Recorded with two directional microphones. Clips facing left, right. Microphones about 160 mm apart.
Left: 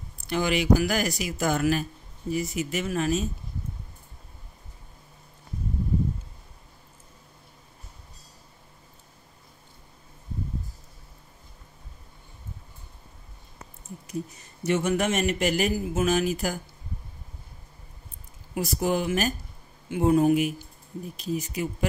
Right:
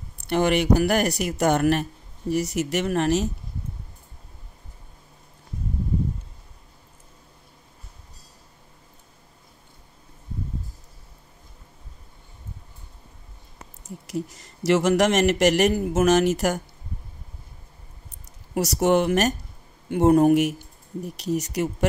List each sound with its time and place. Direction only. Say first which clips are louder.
0.3 s speech: right 3 dB; 65° right (ahead or behind)
13.8 s speech: right 4 dB; 90° right; by 16.6 s 75° right (ahead or behind)
18.6 s speech: right 6 dB; 75° right (ahead or behind)
19.9 s speech: right 4 dB; 55° right (ahead or behind)
20.3 s speech: right 4 dB; 70° right (ahead or behind)